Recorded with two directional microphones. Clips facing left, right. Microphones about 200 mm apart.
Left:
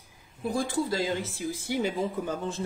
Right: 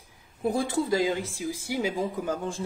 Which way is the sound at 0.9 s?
15° right (ahead or behind).